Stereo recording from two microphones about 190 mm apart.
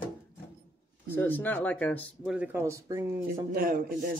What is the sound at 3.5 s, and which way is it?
Speech, 50° right (ahead or behind).